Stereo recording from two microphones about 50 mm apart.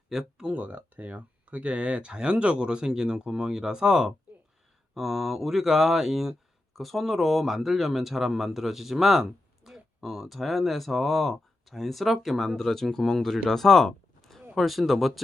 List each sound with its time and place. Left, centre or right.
0.1 s speech: centre
0.5 s speech: right; by 13.4 s centre
13.5 s a sound: centre
14.5 s speech: centre